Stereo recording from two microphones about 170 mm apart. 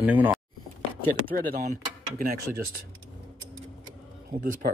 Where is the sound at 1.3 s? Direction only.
60° right (ahead or behind).